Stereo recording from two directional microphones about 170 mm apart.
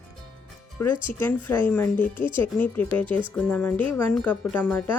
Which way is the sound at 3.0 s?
30° right (ahead or behind).